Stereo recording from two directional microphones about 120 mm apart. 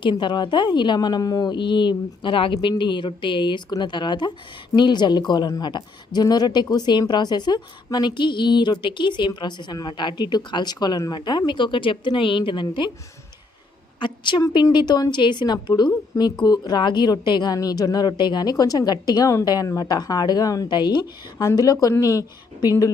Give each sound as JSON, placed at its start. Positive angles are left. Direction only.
{"t": 0.0, "sound": "a woman's voice", "side_deg": 40}
{"t": 14.0, "sound": "a woman's voice", "side_deg": 40}